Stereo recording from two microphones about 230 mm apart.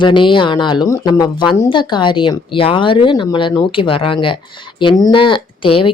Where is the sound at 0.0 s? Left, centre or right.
Left.